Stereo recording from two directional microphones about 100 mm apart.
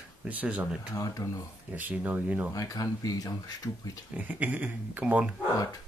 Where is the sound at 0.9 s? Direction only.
35° left (ahead or behind).